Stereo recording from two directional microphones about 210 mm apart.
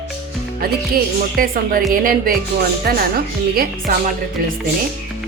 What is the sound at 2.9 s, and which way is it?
Speech, 45° right (ahead or behind).